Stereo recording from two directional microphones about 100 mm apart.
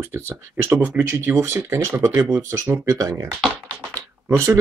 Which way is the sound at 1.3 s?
25° right (ahead or behind).